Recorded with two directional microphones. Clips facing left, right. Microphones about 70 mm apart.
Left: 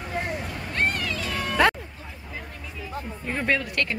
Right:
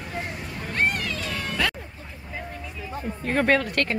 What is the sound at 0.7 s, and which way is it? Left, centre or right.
Vehicle, centre.